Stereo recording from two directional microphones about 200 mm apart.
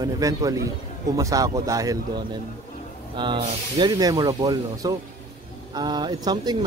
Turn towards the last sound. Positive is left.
turn(degrees=-20)  # may be behind; listen again after turning